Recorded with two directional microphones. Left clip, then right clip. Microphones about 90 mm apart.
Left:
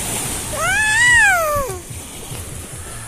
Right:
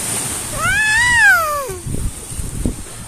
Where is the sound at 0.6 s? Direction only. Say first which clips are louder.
Right 1 dB; 90° right.